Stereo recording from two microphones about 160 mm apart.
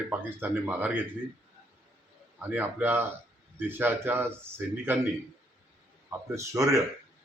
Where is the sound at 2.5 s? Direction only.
10° right (ahead or behind).